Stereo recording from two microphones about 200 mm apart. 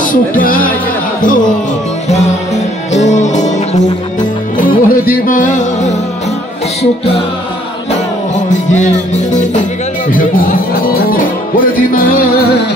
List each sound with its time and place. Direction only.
0.0 s music: 40° left (ahead or behind)
3.1 s music: 35° left (ahead or behind)
8.5 s music: 40° left (ahead or behind)